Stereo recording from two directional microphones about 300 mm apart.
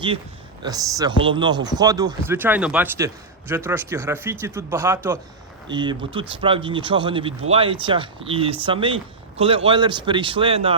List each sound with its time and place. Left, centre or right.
0.6 s speech: centre